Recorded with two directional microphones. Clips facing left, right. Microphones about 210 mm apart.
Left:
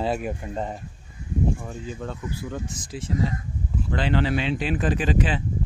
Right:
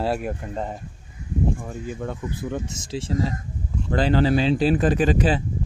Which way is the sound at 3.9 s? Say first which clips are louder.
Right 5 dB; 40° right (ahead or behind).